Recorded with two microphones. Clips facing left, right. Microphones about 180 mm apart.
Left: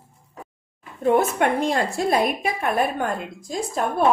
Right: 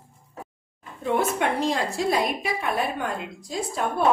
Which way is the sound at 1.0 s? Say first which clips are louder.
Left 5 dB; 50° left (ahead or behind).